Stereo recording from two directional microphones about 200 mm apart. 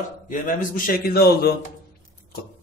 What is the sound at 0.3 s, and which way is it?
Speech, 40° left (ahead or behind).